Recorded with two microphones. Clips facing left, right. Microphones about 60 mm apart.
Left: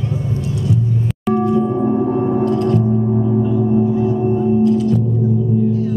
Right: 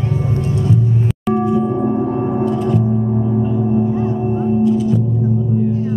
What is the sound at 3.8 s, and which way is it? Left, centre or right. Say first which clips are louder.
Gong: left 2 dB; right.